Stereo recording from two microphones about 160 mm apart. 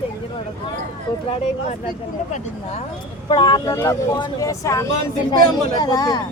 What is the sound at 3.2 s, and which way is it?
Speech, 30° left (ahead or behind).